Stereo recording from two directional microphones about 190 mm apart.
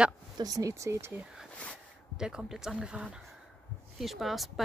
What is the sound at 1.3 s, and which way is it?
Speech, centre (ahead or behind).